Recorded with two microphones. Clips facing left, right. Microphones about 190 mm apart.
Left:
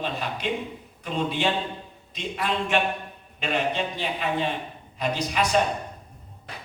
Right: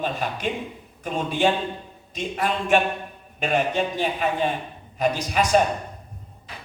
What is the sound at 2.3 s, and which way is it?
A man's voice, 45° right (ahead or behind).